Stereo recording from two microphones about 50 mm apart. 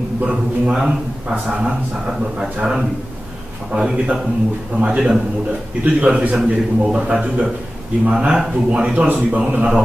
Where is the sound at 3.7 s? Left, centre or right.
Centre.